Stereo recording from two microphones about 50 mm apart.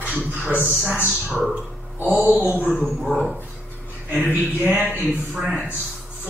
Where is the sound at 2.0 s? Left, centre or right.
Right.